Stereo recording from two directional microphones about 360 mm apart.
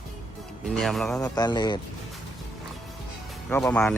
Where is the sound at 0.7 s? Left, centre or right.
Centre.